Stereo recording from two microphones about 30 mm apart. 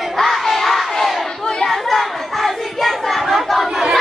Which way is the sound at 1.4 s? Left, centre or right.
Left.